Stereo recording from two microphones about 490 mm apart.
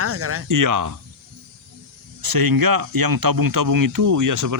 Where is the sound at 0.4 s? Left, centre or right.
Right.